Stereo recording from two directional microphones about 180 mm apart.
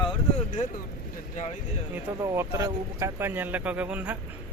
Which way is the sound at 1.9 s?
15° right (ahead or behind).